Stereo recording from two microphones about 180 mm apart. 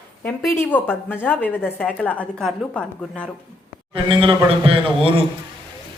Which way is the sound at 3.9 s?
30° right (ahead or behind).